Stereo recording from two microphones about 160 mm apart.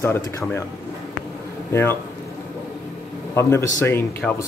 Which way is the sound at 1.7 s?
15° left (ahead or behind).